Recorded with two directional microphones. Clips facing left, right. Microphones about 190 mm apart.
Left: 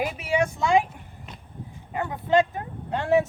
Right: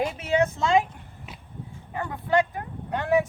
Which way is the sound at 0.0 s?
10° left (ahead or behind).